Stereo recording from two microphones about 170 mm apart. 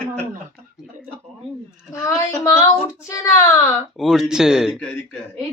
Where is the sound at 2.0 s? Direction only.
20° left (ahead or behind).